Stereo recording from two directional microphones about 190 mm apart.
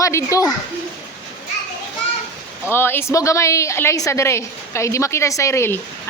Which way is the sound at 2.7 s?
10° left (ahead or behind).